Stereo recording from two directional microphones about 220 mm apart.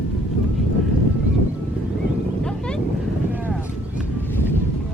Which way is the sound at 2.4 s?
5° left (ahead or behind).